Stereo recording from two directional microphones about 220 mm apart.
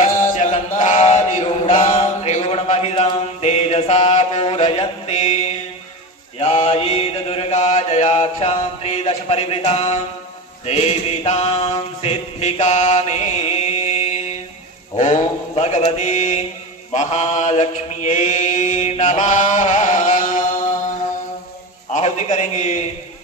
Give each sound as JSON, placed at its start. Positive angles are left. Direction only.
{"t": 0.0, "sound": "chant", "side_deg": 35}
{"t": 6.4, "sound": "mantra", "side_deg": 25}
{"t": 21.9, "sound": "a man's voice", "side_deg": 30}